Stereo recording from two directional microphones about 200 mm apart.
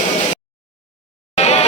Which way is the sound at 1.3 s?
30° left (ahead or behind).